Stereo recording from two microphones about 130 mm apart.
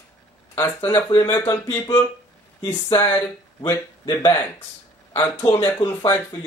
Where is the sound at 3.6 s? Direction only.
35° left (ahead or behind).